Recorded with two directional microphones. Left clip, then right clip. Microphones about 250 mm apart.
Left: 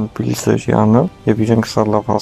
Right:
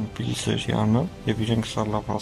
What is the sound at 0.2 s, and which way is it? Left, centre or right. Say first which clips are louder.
Speech: left 11 dB; centre.